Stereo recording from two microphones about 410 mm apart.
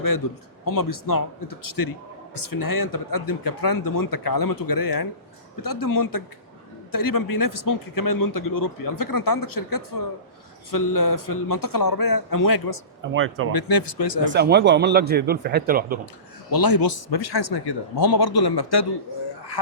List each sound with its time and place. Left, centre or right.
0.2 s speech: left
13.1 s a man's voice: right
13.5 s speech: left
14.3 s a man's voice: right
16.5 s speech: left